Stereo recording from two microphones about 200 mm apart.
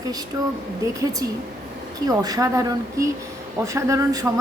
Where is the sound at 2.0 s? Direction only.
20° right (ahead or behind).